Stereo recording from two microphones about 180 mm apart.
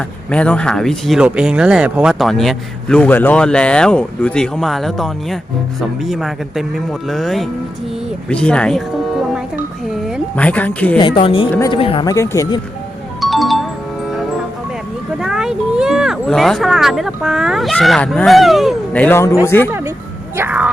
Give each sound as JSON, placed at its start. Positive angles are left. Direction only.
{"t": 0.3, "sound": "speech", "side_deg": 5}
{"t": 9.9, "sound": "speech", "side_deg": 5}
{"t": 10.9, "sound": "a woman's voice", "side_deg": 25}
{"t": 12.1, "sound": "speech", "side_deg": 15}
{"t": 13.2, "sound": "music", "side_deg": 0}
{"t": 15.2, "sound": "speech", "side_deg": -5}
{"t": 20.3, "sound": "speech", "side_deg": -10}